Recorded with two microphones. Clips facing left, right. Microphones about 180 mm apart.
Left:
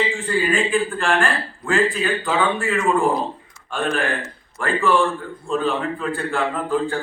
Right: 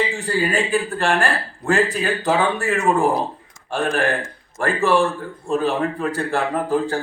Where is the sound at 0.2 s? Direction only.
40° right (ahead or behind).